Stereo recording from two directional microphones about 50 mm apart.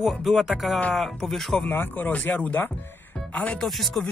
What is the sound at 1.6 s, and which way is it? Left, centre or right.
Speech, left.